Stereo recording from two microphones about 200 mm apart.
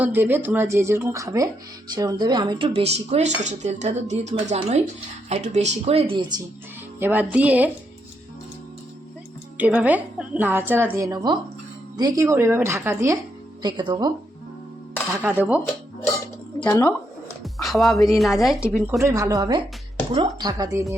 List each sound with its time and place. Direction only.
0.0 s a woman's voice: 10° right (ahead or behind)
7.0 s a woman's voice: 10° right (ahead or behind)
9.6 s a woman's voice: 5° right (ahead or behind)
15.1 s a woman's voice: 10° right (ahead or behind)
16.6 s speech: 10° left (ahead or behind)
17.4 s speech: centre (ahead or behind)
18.9 s a woman's voice: 15° right (ahead or behind)